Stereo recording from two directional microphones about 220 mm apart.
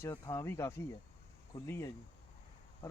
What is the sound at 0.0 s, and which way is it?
Speech, 15° left (ahead or behind).